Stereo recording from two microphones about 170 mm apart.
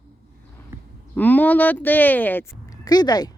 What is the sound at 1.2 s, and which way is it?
Speech, 10° left (ahead or behind).